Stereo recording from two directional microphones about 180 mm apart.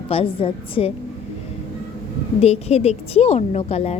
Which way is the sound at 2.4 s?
35° left (ahead or behind).